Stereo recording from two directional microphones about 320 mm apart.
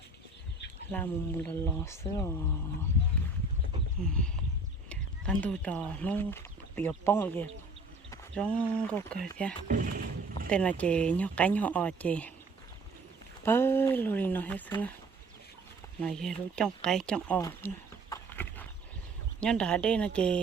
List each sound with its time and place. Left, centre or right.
0.9 s speech: centre
4.9 s speech: centre
9.6 s speech: right
10.5 s speech: centre
13.4 s speech: centre
16.0 s speech: centre
18.1 s horse: centre
19.4 s speech: centre